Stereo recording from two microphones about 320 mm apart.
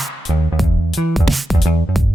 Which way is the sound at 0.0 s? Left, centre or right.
Centre.